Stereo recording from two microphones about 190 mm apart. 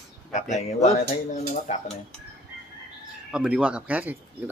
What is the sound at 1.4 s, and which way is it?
Speech, 40° left (ahead or behind).